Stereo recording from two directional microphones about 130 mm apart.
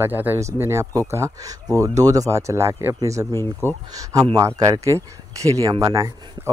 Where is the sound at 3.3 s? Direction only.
20° left (ahead or behind).